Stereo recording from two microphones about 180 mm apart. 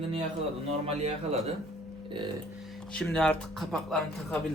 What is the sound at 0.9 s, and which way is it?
Speech, 35° right (ahead or behind).